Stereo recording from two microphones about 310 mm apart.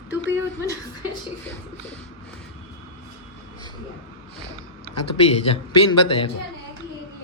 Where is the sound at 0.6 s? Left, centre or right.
Centre.